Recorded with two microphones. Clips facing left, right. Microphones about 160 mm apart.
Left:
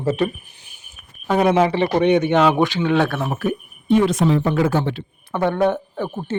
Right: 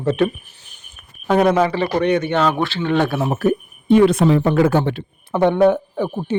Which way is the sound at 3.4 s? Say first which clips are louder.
Right 5 dB; 55° right (ahead or behind).